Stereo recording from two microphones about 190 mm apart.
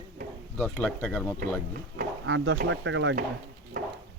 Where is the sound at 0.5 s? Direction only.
5° left (ahead or behind).